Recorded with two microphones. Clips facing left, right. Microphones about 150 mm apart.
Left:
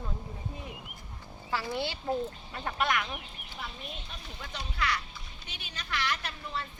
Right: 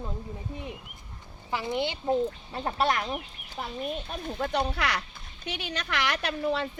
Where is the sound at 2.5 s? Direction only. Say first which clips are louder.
Right 1 dB; 30° right (ahead or behind).